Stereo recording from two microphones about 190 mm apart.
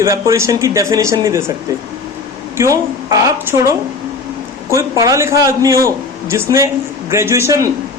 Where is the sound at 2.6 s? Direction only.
15° right (ahead or behind).